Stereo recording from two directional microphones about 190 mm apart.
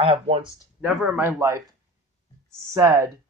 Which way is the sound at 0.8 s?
5° right (ahead or behind).